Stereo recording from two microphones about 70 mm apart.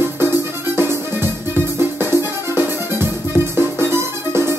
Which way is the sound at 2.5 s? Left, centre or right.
Right.